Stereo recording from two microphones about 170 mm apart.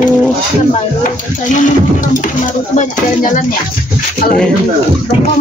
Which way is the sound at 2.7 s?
50° left (ahead or behind).